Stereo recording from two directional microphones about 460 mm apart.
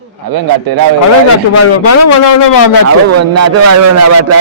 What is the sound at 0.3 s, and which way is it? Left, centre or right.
Speech, right.